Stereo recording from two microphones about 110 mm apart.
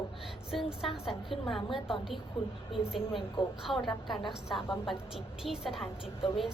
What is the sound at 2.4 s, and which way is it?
Speech, 50° left (ahead or behind).